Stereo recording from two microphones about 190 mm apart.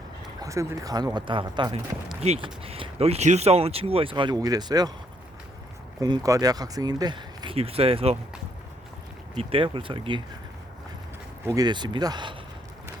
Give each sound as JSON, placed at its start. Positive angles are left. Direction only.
{"t": 0.4, "sound": "speech", "side_deg": -15}
{"t": 6.0, "sound": "speech", "side_deg": -20}
{"t": 9.4, "sound": "speech", "side_deg": -30}
{"t": 11.4, "sound": "speech", "side_deg": -20}